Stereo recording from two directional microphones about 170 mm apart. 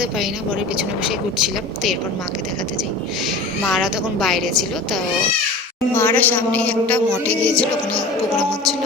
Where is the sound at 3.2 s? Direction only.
Centre (ahead or behind).